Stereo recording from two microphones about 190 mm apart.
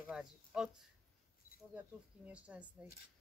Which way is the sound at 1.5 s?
50° left (ahead or behind).